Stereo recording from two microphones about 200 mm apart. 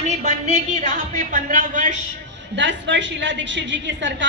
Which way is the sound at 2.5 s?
65° right (ahead or behind).